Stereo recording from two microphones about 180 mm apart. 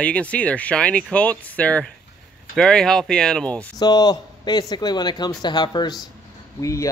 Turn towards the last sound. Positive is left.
turn(degrees=20)  # may be behind; listen again after turning